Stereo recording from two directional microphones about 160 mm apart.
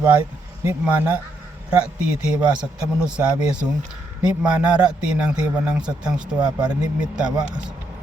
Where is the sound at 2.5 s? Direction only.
5° right (ahead or behind).